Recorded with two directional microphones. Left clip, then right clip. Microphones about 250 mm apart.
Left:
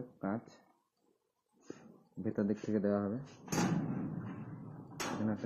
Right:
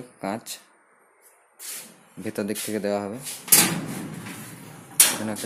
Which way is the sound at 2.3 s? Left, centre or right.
Centre.